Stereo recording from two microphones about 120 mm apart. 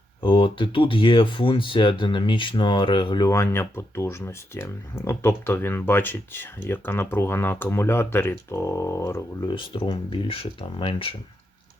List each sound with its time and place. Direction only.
0.2 s speech: 45° left (ahead or behind)
3.2 s speech: 20° left (ahead or behind)
9.5 s speech: 40° left (ahead or behind)